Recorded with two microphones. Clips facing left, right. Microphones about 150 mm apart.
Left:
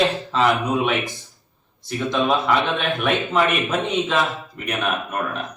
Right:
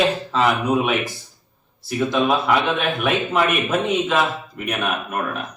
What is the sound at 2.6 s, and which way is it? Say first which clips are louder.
Speech: right 1 dB; 5° right (ahead or behind).